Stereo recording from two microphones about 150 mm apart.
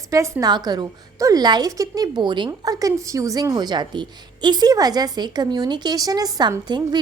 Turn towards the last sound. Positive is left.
turn(degrees=-30)  # may be behind; listen again after turning